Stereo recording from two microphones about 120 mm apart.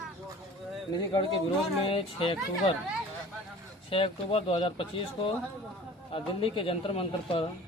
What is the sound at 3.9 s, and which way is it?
Speech, 45° left (ahead or behind).